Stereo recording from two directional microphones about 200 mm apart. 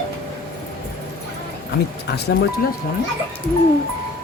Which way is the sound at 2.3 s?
65° left (ahead or behind).